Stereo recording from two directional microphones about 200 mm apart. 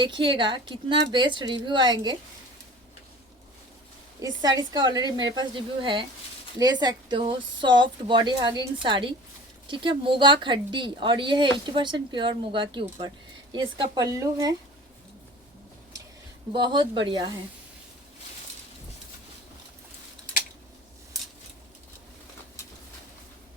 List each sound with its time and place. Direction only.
0.0 s a woman's voice: 25° right (ahead or behind)
4.2 s a woman's voice: 20° right (ahead or behind)
16.5 s a woman's voice: 20° right (ahead or behind)